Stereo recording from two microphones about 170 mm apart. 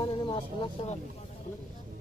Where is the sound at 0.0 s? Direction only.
30° left (ahead or behind).